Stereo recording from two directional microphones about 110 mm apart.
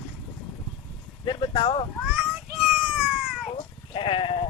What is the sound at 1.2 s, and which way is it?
Speech, 40° left (ahead or behind).